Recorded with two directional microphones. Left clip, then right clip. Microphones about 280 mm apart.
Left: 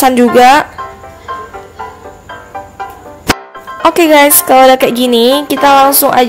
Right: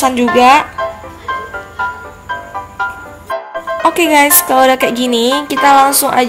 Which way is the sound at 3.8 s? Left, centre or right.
Centre.